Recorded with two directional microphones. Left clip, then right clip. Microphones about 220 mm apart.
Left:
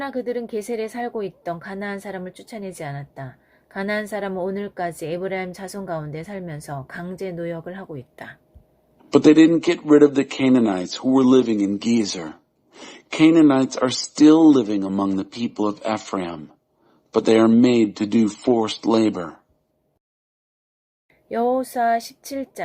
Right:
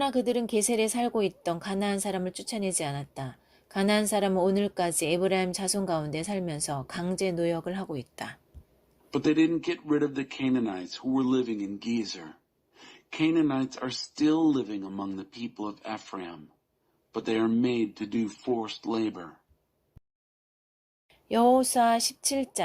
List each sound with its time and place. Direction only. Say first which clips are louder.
0.0 s a woman's voice: left 1 dB; 25° right (ahead or behind)
9.0 s a man's voice: left 12 dB; 50° left (ahead or behind)
21.2 s a woman's voice: left 1 dB; 25° right (ahead or behind)